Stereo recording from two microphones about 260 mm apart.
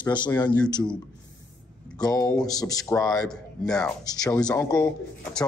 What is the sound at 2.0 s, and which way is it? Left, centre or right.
Speech, centre.